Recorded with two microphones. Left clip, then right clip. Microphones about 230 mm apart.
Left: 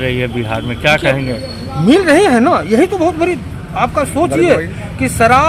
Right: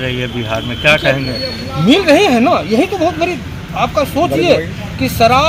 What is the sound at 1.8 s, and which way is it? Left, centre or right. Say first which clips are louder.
Speech: even; centre.